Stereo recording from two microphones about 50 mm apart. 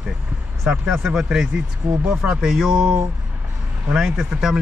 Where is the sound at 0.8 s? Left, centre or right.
Centre.